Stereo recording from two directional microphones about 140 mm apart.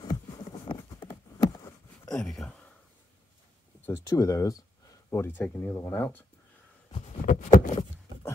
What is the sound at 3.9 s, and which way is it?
Speech, 25° left (ahead or behind).